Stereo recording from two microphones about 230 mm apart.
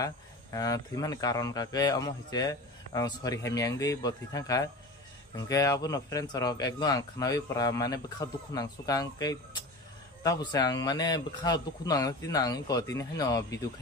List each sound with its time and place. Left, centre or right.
0.0 s speech: centre